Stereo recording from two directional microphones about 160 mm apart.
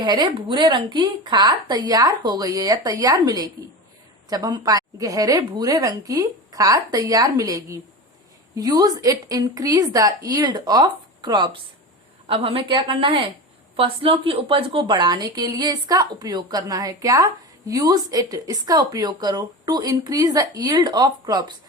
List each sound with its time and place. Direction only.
0.0 s a woman's voice: 25° right (ahead or behind)